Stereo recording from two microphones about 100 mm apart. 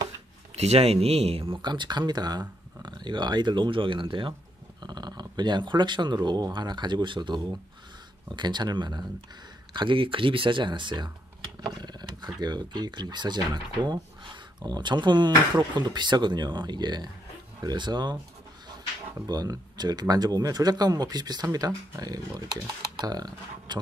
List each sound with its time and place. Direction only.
0.6 s speech: 90° right; by 1.6 s 75° right (ahead or behind)
1.6 s speech: 50° right (ahead or behind)
4.8 s speech: 45° right (ahead or behind)
9.8 s speech: 60° right (ahead or behind)
11.6 s a sound: 45° right (ahead or behind)
12.4 s speech: 45° right (ahead or behind)
19.2 s speech: 40° right (ahead or behind)